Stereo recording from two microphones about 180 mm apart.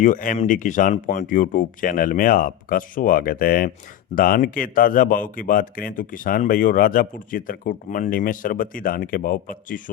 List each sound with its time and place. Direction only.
0.0 s a man's voice: 45° left (ahead or behind)